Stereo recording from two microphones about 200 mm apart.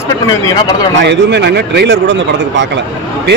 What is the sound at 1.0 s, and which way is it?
Speech, 60° right (ahead or behind).